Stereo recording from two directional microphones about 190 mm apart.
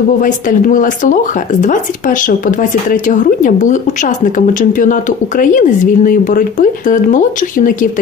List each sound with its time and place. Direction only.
0.2 s speech: 45° left (ahead or behind)